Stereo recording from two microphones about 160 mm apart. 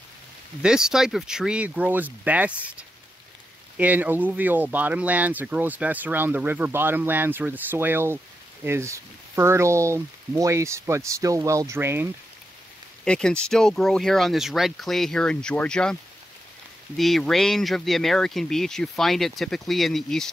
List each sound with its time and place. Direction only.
0.6 s speech: 5° right (ahead or behind)
13.0 s speech: 5° left (ahead or behind)